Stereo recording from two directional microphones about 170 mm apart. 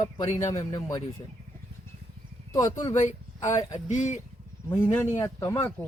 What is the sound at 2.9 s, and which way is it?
Speech, 45° left (ahead or behind).